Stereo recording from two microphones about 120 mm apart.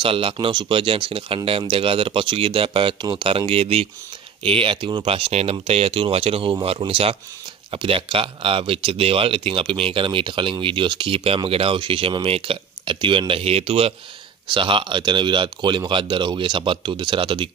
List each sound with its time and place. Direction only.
0.0 s speech: 50° right (ahead or behind)
14.5 s speech: 45° right (ahead or behind)